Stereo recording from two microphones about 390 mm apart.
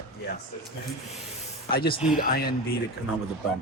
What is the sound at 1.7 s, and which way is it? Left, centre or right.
Speech, left.